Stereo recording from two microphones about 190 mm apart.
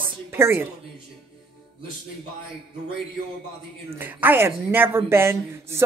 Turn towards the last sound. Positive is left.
turn(degrees=-15)  # may be behind; listen again after turning